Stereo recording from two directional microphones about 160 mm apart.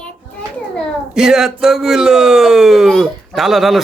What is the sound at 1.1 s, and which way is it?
Speech, 5° right (ahead or behind).